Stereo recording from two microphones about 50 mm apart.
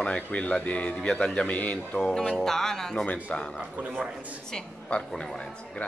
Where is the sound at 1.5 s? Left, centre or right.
Left.